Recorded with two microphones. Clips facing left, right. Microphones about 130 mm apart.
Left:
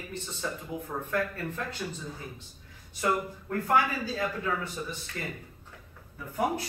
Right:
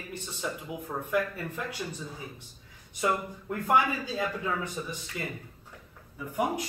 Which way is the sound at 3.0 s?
15° right (ahead or behind).